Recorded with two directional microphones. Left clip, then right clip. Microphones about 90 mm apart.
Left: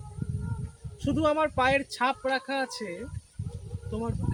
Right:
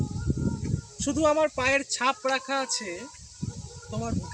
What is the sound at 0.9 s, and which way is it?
Speech, 20° left (ahead or behind).